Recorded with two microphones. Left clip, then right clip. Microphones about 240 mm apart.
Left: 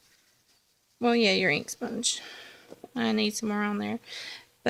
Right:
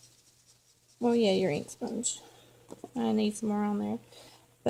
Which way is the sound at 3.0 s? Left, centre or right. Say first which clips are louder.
Left 3 dB; left.